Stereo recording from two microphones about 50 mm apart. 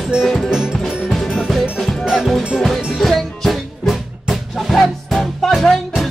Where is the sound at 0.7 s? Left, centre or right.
Centre.